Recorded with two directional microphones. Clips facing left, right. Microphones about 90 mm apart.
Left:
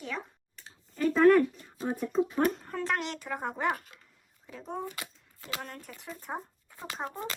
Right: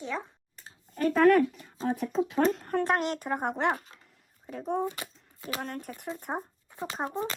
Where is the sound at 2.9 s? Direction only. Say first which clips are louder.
Right 5 dB; 45° right (ahead or behind).